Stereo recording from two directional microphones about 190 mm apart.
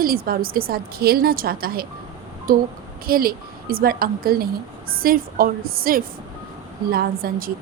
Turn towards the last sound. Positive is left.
turn(degrees=-50)  # may be behind; listen again after turning